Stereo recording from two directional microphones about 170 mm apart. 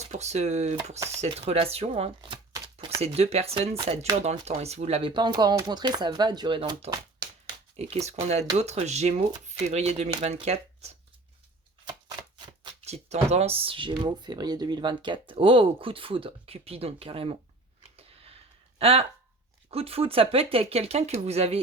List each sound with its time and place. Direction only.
0.1 s speech: 40° right (ahead or behind); by 3.0 s 25° right (ahead or behind)
3.0 s speech: 35° right (ahead or behind)
12.8 s speech: 40° right (ahead or behind)
17.9 s a sound: 35° right (ahead or behind)
18.8 s speech: 35° right (ahead or behind)